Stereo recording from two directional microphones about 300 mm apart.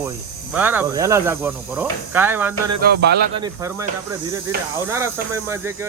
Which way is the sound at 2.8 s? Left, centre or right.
Right.